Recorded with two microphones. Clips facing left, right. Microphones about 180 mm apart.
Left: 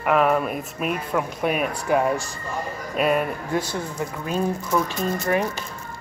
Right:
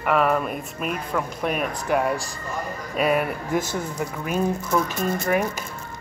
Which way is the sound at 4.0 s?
15° right (ahead or behind).